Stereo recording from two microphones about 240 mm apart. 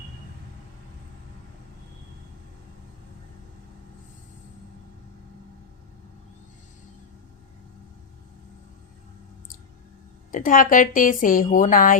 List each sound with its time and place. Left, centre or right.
10.3 s a woman's voice: left